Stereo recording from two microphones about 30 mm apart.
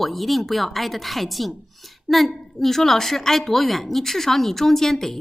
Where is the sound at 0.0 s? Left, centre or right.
Centre.